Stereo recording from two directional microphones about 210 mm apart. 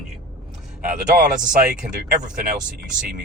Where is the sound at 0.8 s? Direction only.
40° right (ahead or behind).